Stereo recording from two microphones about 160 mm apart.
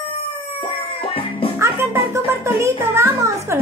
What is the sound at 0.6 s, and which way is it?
Music, 35° left (ahead or behind).